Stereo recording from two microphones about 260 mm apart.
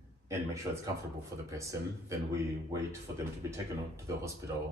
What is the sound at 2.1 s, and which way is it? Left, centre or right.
Speech, centre.